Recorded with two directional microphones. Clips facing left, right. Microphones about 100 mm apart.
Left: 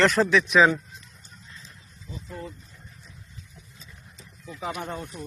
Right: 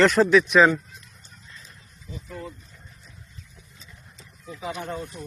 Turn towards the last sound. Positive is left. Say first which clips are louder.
# right 2 dB
turn(degrees=20)  # may be behind; listen again after turning